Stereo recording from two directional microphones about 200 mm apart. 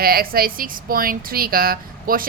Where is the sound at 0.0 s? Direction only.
50° right (ahead or behind).